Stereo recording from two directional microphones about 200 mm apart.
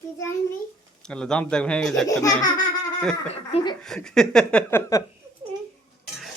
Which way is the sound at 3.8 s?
5° left (ahead or behind).